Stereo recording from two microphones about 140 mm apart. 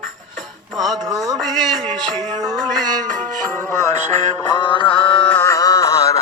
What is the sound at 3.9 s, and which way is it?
Music, 60° right (ahead or behind).